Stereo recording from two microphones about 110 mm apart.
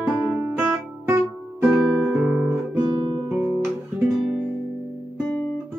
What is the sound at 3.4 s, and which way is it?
Guitar, 25° right (ahead or behind).